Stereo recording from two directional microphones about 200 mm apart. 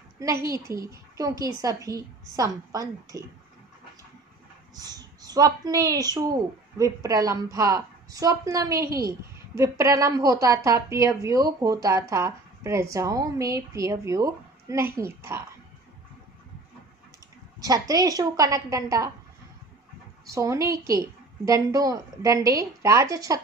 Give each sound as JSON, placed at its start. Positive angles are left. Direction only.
{"t": 0.2, "sound": "a woman's voice", "side_deg": -15}
{"t": 4.7, "sound": "a woman's voice", "side_deg": -20}
{"t": 17.6, "sound": "a woman's voice", "side_deg": -20}
{"t": 20.2, "sound": "a woman's voice", "side_deg": -15}